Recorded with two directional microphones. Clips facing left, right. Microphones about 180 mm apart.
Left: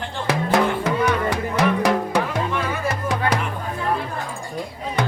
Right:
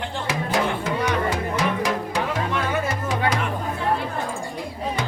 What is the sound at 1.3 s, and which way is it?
Music, 60° left (ahead or behind).